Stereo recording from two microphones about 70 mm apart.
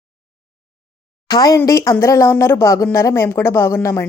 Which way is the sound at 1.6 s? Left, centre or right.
Left.